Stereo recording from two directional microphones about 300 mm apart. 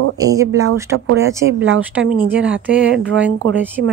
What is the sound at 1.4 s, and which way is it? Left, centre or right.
Speech, right.